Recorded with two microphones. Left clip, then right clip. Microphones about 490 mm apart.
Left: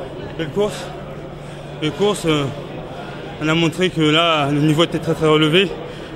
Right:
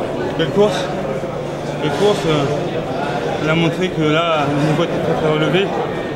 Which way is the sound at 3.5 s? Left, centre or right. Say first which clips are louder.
Left 3 dB; left.